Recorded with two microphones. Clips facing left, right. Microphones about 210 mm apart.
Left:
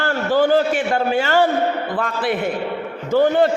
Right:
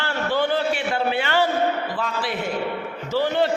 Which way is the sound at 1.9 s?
55° left (ahead or behind).